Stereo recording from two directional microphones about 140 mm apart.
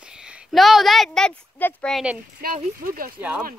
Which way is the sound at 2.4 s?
90° right.